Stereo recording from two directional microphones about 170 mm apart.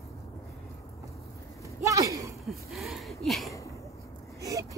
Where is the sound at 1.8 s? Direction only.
20° right (ahead or behind).